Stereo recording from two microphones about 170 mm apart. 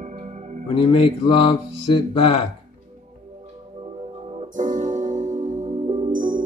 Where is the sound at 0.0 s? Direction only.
45° right (ahead or behind).